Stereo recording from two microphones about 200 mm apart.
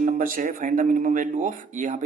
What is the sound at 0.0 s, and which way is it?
Speech, 45° right (ahead or behind).